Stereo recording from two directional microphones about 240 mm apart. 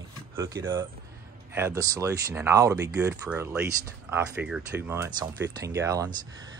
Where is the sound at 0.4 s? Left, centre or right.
Centre.